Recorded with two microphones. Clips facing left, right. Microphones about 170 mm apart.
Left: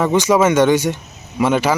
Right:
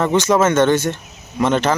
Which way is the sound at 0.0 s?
10° left (ahead or behind).